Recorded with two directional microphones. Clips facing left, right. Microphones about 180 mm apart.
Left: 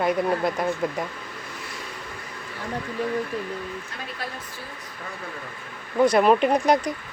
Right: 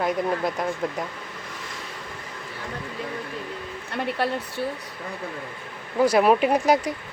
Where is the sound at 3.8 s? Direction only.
65° right (ahead or behind).